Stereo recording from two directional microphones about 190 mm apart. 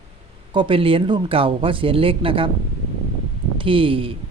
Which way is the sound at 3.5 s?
30° right (ahead or behind).